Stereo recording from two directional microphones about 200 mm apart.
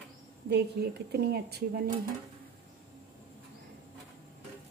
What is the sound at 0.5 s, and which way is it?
A woman's voice, 55° right (ahead or behind).